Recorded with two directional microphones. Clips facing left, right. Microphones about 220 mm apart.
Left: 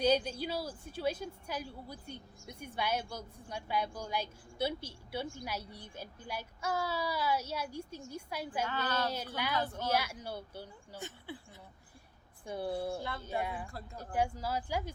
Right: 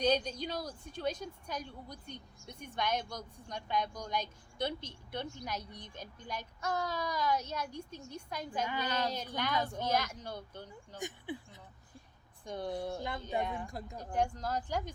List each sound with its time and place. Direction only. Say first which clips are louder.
0.0 s a woman's voice: left 1 dB; 5° left (ahead or behind)
8.6 s speech: even; 15° right (ahead or behind)
9.1 s a woman's voice: even; 10° left (ahead or behind)
10.9 s speech: right 4 dB; 15° right (ahead or behind)
12.5 s a woman's voice: left 1 dB; 5° left (ahead or behind)
13.0 s speech: right 1 dB; 15° right (ahead or behind)
13.4 s a woman's voice: right 1 dB; 5° left (ahead or behind)
13.7 s speech: right 3 dB; 15° right (ahead or behind)
14.0 s a woman's voice: even; 5° left (ahead or behind)